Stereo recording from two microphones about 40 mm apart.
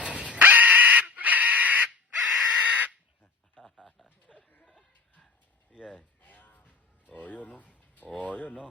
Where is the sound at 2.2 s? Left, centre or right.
Centre.